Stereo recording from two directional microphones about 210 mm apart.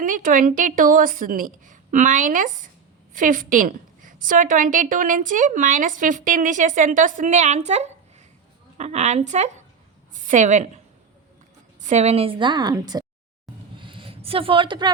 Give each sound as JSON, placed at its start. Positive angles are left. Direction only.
{"t": 0.0, "sound": "a woman's voice", "side_deg": -40}
{"t": 11.8, "sound": "a woman's voice", "side_deg": -35}
{"t": 13.7, "sound": "a sound", "side_deg": -25}